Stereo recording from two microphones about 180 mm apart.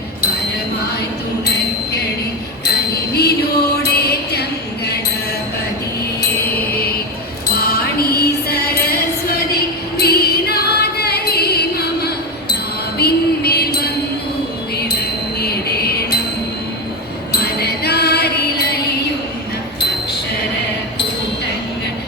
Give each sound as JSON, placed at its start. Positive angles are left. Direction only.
{"t": 2.6, "sound": "music", "side_deg": 60}
{"t": 3.8, "sound": "mantra", "side_deg": 65}
{"t": 7.5, "sound": "music", "side_deg": 60}
{"t": 10.0, "sound": "music", "side_deg": 60}
{"t": 15.4, "sound": "music", "side_deg": 60}
{"t": 17.4, "sound": "music", "side_deg": 60}